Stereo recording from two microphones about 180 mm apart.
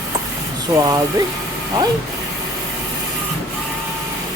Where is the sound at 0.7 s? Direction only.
20° right (ahead or behind).